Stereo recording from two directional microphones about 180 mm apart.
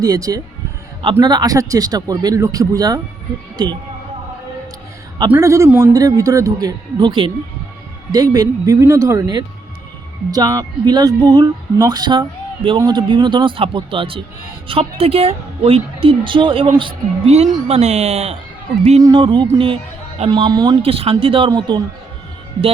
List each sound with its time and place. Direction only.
0.0 s a woman's voice: 20° right (ahead or behind)
5.3 s a man's voice: 15° right (ahead or behind); by 18.3 s 35° right (ahead or behind)
19.0 s a woman's voice: 25° right (ahead or behind)